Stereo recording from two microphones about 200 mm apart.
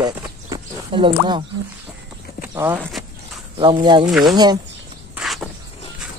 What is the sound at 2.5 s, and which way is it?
Speech, 10° right (ahead or behind).